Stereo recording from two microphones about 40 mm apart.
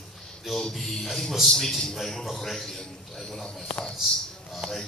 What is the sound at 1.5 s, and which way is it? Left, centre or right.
A man's voice, centre.